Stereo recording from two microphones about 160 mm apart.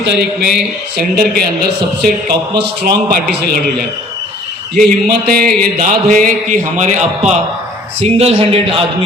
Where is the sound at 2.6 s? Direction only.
70° right (ahead or behind).